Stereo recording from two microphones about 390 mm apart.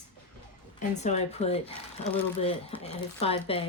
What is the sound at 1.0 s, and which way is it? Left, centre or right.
Speech, centre.